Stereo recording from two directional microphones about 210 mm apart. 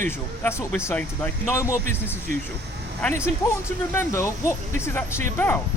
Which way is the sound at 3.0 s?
10° left (ahead or behind).